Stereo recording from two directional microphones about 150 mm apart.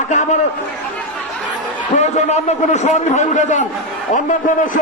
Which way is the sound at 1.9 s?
50° left (ahead or behind).